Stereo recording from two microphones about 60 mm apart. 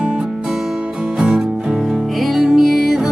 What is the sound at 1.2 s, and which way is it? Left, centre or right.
Music, centre.